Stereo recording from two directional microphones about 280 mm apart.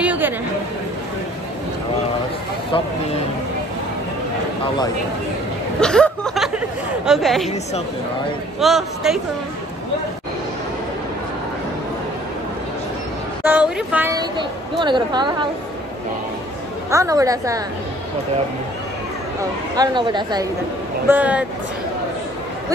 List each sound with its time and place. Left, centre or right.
0.0 s chatter: centre
5.8 s a sound: centre
7.1 s a man's voice: centre
8.5 s a man's voice: centre
13.4 s a woman's voice: centre
16.9 s a woman's voice: centre
19.7 s a woman's voice: centre
21.1 s a man's voice: centre